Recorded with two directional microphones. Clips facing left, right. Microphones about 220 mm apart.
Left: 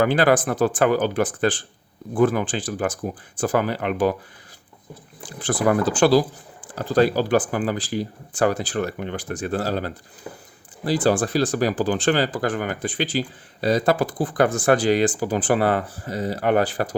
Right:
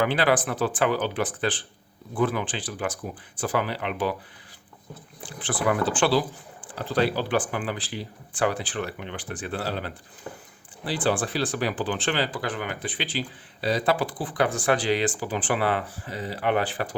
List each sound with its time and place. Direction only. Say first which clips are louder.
0.0 s speech: left 5 dB; 45° left (ahead or behind)
5.2 s speech: left 5 dB; 40° left (ahead or behind)
10.3 s speech: left 2 dB; 10° left (ahead or behind)
10.8 s speech: left 6 dB; 40° left (ahead or behind)